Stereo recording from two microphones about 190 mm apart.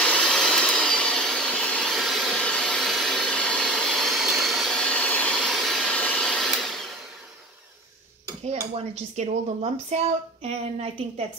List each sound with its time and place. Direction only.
0.0 s vacuum cleaner: 5° left (ahead or behind)
8.7 s a woman's voice: 35° right (ahead or behind)